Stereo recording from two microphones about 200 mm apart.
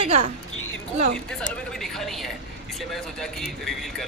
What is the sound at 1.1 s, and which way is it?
Speech, 5° left (ahead or behind).